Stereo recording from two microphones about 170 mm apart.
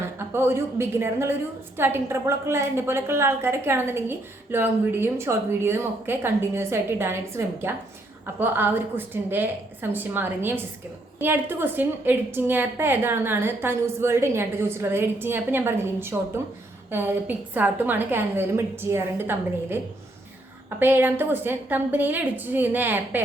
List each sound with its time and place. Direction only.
0.0 s a woman's voice: 15° right (ahead or behind)